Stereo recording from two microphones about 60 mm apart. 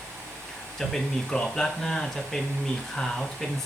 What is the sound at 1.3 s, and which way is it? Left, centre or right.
Speech, centre.